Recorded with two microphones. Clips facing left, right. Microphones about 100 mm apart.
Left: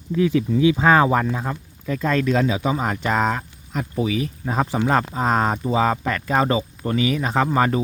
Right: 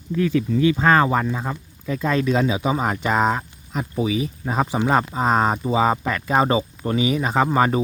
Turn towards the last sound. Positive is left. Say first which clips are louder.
# right 1 dB
turn(degrees=-20)  # may be behind; listen again after turning